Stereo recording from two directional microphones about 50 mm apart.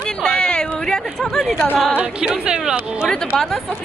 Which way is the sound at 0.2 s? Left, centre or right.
Centre.